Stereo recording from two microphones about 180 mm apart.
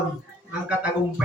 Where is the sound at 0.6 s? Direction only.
5° right (ahead or behind).